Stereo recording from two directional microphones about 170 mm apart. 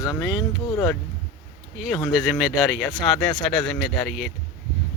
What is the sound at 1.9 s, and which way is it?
Speech, 25° left (ahead or behind).